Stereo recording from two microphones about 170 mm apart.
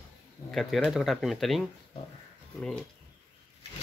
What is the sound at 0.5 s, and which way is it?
Speech, centre (ahead or behind).